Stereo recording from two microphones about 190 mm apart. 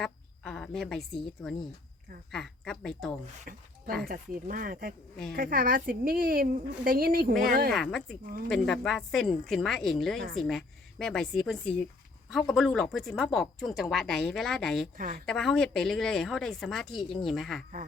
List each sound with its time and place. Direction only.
0.0 s a woman's voice: 5° left (ahead or behind)
3.5 s a woman's voice: 50° right (ahead or behind)
7.7 s speech: 5° left (ahead or behind)
14.9 s a woman's voice: 45° right (ahead or behind)
15.3 s speech: 5° left (ahead or behind)